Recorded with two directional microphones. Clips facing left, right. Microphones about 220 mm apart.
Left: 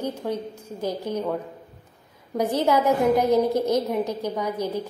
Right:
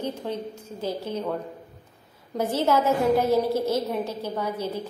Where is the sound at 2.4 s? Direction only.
15° left (ahead or behind).